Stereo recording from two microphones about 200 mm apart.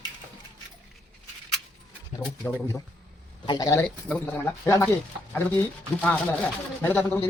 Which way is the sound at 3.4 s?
20° left (ahead or behind).